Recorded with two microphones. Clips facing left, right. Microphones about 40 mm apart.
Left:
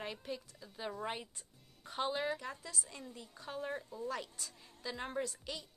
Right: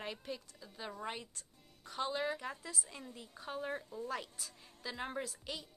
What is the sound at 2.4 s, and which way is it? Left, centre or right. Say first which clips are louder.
A woman's voice: right 1 dB; centre.